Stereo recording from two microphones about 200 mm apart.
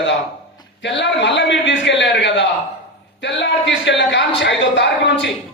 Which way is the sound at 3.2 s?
60° left (ahead or behind).